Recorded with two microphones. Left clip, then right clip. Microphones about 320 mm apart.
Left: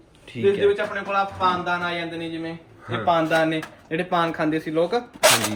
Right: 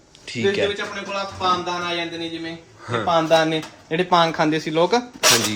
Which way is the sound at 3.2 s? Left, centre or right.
Centre.